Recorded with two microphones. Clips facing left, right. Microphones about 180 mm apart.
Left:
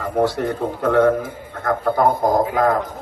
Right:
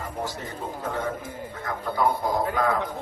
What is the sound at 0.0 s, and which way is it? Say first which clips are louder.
A man's voice: left 13 dB; 65° left (ahead or behind).